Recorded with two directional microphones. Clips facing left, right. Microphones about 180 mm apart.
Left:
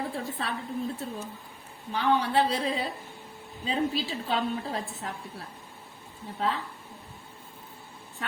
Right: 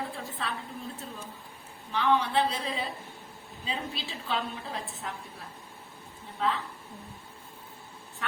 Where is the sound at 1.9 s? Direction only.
35° left (ahead or behind).